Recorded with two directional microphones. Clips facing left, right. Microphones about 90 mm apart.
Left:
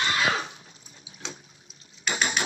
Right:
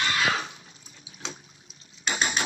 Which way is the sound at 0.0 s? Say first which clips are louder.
Left 1 dB; 30° left (ahead or behind).